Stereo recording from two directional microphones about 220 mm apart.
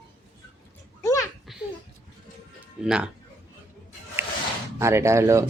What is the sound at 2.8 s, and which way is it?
Speech, 5° right (ahead or behind).